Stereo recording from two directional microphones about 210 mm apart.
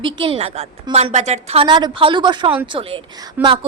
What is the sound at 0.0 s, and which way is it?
A woman's voice, 25° right (ahead or behind).